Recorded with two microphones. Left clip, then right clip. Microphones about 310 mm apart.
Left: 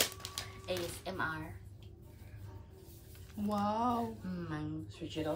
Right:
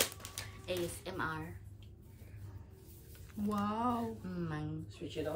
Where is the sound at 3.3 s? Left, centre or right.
Centre.